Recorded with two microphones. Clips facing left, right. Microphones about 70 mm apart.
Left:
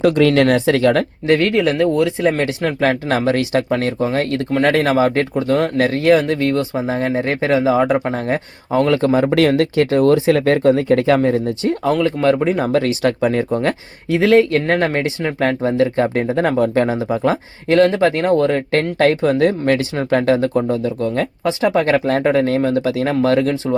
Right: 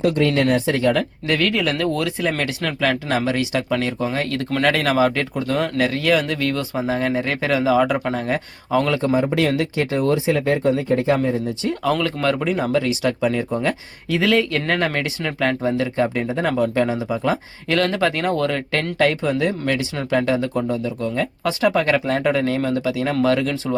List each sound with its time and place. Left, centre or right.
0.0 s speech: left
1.3 s speech: left
9.0 s speech: left
11.2 s speech: left
11.9 s speech: left
12.5 s speech: left
14.1 s speech: left